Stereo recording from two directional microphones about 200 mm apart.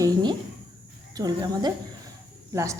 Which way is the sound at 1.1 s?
20° right (ahead or behind).